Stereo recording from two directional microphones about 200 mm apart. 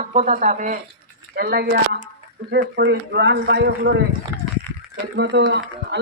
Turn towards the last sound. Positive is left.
turn(degrees=-60)  # may be behind; listen again after turning